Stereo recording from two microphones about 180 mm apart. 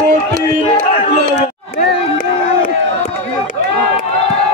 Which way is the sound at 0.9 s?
30° left (ahead or behind).